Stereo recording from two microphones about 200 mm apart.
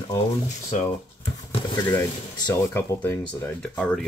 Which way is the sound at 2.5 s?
10° left (ahead or behind).